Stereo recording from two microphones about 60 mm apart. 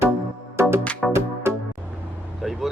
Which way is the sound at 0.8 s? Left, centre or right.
Left.